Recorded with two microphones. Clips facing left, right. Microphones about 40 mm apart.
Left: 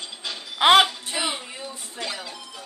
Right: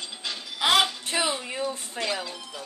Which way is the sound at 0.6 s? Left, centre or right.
Left.